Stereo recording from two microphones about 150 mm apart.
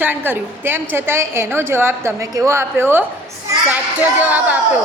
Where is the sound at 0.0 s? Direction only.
15° right (ahead or behind).